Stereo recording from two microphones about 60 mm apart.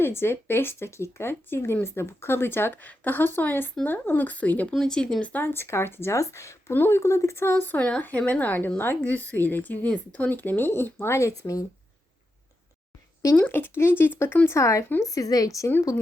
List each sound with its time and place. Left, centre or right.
0.0 s speech: left
4.7 s speech: centre
5.2 s speech: left
5.5 s speech: left
6.7 s speech: left
7.0 s speech: left
7.5 s speech: left
7.8 s speech: centre
8.3 s speech: left
13.5 s speech: left
14.4 s speech: left